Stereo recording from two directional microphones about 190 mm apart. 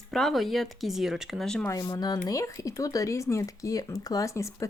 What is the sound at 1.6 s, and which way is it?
Speech, 20° left (ahead or behind).